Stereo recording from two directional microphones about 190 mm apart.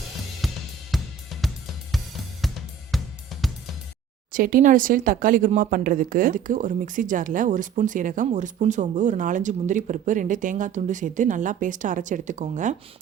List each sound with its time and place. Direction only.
0.4 s cymbal: centre (ahead or behind)
2.4 s drum kit: centre (ahead or behind)
4.3 s speech: 45° right (ahead or behind)